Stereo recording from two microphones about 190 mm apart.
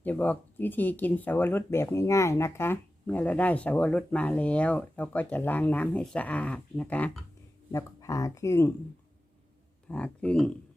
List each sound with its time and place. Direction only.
0.0 s speech: 10° left (ahead or behind)
9.9 s speech: 5° left (ahead or behind)